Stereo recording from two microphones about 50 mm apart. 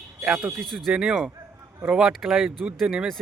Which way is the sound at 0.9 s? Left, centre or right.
Centre.